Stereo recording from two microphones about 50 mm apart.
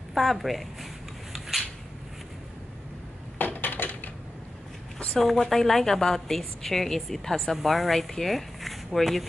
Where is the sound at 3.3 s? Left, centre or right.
Left.